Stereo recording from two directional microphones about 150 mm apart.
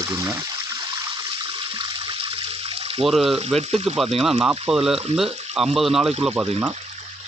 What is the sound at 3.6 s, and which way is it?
Speech, 45° right (ahead or behind).